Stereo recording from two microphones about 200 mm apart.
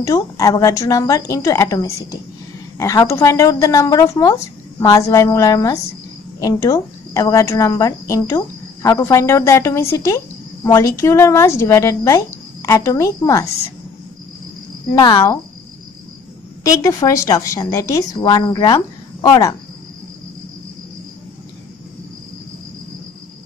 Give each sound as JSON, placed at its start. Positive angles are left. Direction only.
{"t": 0.0, "sound": "speech", "side_deg": 15}
{"t": 15.0, "sound": "speech", "side_deg": 15}
{"t": 16.6, "sound": "speech", "side_deg": 15}